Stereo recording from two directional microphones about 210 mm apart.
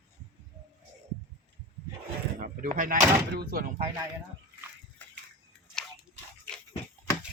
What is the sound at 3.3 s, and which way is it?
Speech, 45° right (ahead or behind).